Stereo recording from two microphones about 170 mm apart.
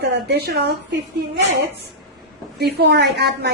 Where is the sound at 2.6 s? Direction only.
75° right (ahead or behind).